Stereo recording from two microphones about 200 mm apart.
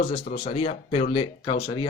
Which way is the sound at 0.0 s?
40° left (ahead or behind).